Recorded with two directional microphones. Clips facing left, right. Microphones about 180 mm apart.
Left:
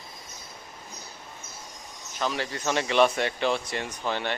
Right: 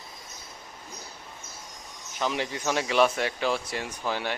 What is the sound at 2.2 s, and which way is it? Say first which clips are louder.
Speech: even; 15° right (ahead or behind).